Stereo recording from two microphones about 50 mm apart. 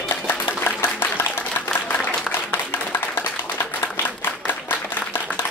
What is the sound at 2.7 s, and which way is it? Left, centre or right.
Clapping, left.